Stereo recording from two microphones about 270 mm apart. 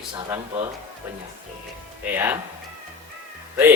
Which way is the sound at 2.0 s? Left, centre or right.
Centre.